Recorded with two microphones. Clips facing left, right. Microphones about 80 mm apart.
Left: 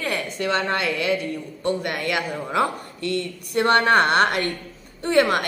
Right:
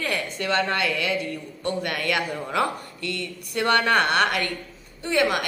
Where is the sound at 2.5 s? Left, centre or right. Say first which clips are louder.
Left 3 dB; left.